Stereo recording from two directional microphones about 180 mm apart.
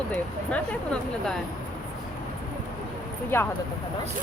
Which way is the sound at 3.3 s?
15° left (ahead or behind).